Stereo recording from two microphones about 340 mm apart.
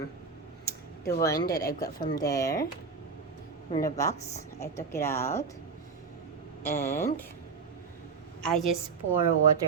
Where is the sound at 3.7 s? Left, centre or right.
Left.